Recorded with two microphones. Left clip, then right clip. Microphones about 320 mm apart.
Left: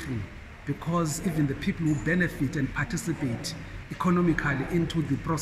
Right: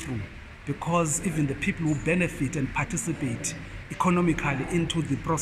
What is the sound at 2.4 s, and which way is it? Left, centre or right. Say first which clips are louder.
A man's voice: right 1 dB; centre.